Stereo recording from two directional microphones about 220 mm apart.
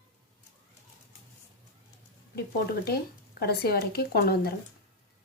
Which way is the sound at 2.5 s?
45° left (ahead or behind).